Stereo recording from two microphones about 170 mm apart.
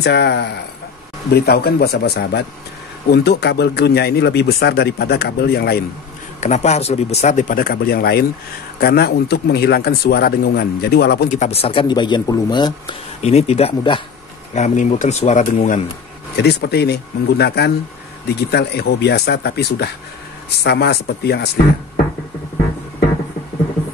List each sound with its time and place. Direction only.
0.0 s speech: 75° left (ahead or behind)
6.4 s speech: 40° left (ahead or behind); by 11.2 s 70° left (ahead or behind)
11.2 s speech: 45° left (ahead or behind); by 12.9 s 25° left (ahead or behind)
13.2 s speech: 40° left (ahead or behind)
14.5 s speech: 45° left (ahead or behind)
16.3 s speech: 75° left (ahead or behind)